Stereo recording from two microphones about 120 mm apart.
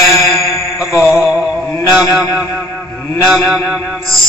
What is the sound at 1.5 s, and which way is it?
Mantra, 20° left (ahead or behind).